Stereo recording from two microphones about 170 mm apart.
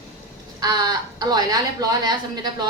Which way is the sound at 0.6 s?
25° right (ahead or behind).